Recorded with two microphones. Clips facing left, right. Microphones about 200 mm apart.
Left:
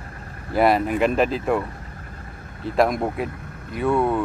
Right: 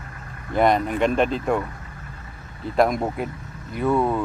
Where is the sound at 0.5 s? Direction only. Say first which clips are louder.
Left 1 dB; 5° left (ahead or behind).